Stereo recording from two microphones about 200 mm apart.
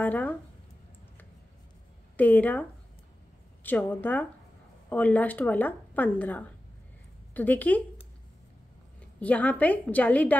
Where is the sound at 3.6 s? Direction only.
10° left (ahead or behind).